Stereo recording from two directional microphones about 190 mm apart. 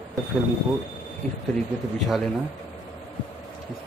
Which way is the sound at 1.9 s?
Centre (ahead or behind).